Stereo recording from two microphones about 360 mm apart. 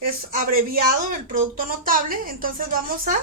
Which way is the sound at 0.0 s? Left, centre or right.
Right.